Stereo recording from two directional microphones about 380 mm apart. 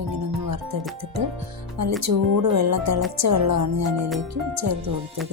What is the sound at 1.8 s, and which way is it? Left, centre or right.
A woman's voice, right.